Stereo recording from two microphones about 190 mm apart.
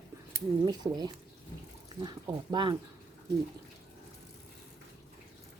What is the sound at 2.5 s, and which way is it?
Speech, 25° right (ahead or behind).